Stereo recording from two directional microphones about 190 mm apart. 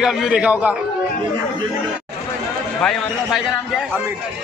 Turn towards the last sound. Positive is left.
turn(degrees=0)  # may be behind; listen again after turning